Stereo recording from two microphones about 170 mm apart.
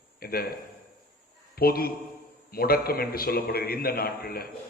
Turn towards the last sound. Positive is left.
turn(degrees=65)  # may be behind; listen again after turning